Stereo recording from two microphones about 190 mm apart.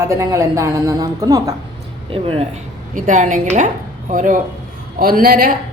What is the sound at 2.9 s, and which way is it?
A woman's voice, 40° right (ahead or behind).